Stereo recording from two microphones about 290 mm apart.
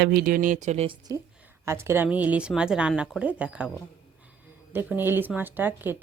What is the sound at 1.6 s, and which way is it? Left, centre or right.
A woman's voice, centre.